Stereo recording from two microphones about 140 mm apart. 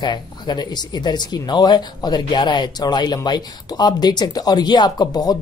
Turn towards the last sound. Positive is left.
turn(degrees=30)  # may be behind; listen again after turning